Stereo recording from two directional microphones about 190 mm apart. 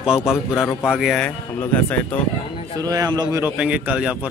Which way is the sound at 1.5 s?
10° left (ahead or behind).